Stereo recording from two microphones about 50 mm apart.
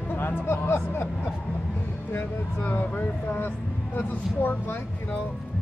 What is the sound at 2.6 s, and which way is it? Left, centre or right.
Speech, left.